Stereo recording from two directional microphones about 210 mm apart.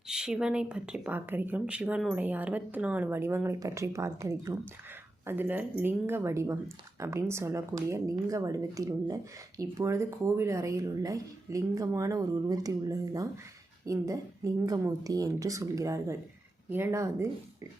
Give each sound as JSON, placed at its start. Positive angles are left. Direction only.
{"t": 0.1, "sound": "speech", "side_deg": -5}